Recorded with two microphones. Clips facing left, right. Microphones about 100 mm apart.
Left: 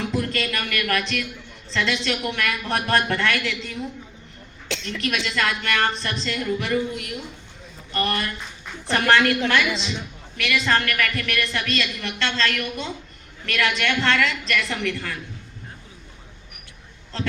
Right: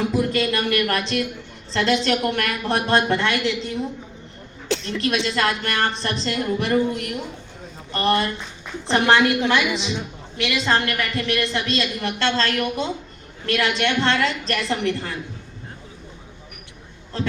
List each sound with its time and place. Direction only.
0.0 s a sound: 15° right (ahead or behind)
0.5 s a woman's voice: 30° right (ahead or behind)
2.7 s a woman's voice: 25° right (ahead or behind)
7.9 s a woman's voice: 30° right (ahead or behind)
8.9 s a woman's voice: 20° right (ahead or behind)
10.3 s a woman's voice: 25° right (ahead or behind)